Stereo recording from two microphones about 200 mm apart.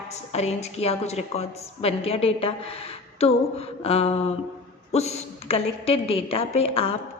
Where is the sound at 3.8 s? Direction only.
30° left (ahead or behind).